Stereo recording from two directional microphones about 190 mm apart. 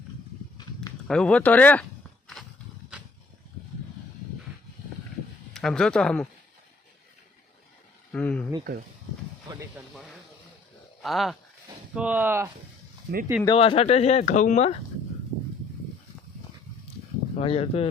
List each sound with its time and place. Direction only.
0.6 s a sound: 20° left (ahead or behind)
1.0 s speech: 5° left (ahead or behind)
5.5 s speech: centre (ahead or behind)
8.1 s speech: 5° left (ahead or behind)
9.5 s speech: 15° right (ahead or behind)
11.0 s speech: centre (ahead or behind)
13.1 s speech: 50° right (ahead or behind)
13.4 s speech: 25° left (ahead or behind)
17.3 s speech: 30° left (ahead or behind)